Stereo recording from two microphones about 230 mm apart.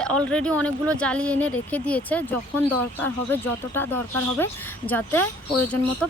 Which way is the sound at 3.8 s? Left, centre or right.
Centre.